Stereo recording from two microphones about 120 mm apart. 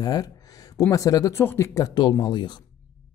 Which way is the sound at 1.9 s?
40° left (ahead or behind).